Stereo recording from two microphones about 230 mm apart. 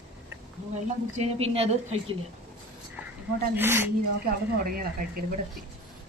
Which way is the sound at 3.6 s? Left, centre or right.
Centre.